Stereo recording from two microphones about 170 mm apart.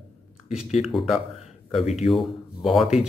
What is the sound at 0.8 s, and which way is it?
Speech, centre (ahead or behind).